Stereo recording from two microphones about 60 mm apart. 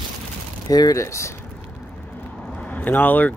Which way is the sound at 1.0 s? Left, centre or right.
Left.